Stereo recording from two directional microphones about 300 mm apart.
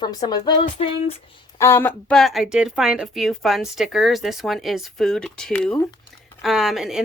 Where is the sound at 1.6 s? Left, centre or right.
Centre.